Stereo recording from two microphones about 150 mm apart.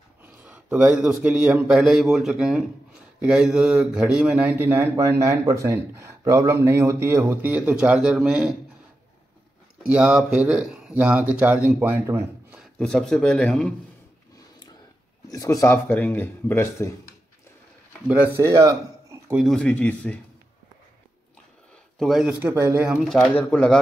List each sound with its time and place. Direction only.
0.2 s a man's voice: 10° right (ahead or behind)
9.8 s speech: 5° right (ahead or behind)
12.5 s a man's voice: 5° left (ahead or behind)
15.3 s speech: 25° left (ahead or behind)
18.0 s speech: 10° right (ahead or behind)
19.3 s speech: centre (ahead or behind)
21.9 s speech: centre (ahead or behind)
22.5 s speech: 15° right (ahead or behind)
22.8 s speech: centre (ahead or behind)